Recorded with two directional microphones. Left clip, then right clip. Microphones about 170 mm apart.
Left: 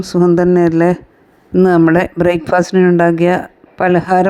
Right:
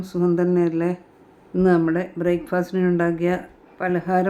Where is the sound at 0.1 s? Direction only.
40° left (ahead or behind).